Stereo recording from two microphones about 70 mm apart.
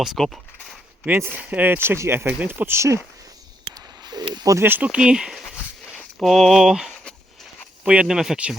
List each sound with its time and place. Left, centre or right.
0.0 s speech: centre
1.4 s speech: right
4.0 s a sound: right
4.6 s speech: right
4.9 s speech: centre
6.1 s speech: centre